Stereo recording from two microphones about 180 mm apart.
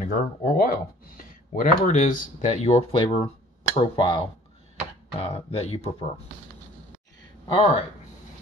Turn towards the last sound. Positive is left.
turn(degrees=30)  # may be behind; listen again after turning